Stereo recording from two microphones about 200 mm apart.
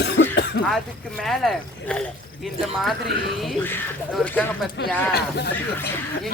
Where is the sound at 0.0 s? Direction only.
55° left (ahead or behind).